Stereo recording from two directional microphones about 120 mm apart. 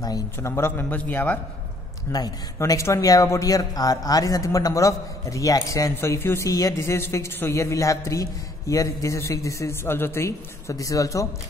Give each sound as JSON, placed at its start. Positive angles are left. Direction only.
{"t": 0.0, "sound": "a man's voice", "side_deg": 30}
{"t": 0.5, "sound": "a man's voice", "side_deg": 20}
{"t": 2.1, "sound": "speech", "side_deg": 30}